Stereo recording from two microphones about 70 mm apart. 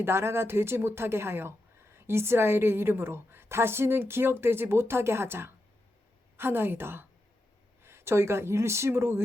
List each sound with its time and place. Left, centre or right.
0.0 s speech: right